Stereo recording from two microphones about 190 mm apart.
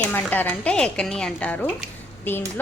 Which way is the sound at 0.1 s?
10° left (ahead or behind).